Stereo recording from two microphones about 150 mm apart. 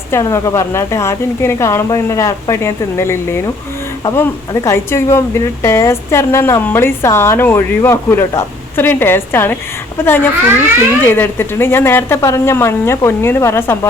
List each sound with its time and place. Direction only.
0.1 s a woman's voice: 20° left (ahead or behind)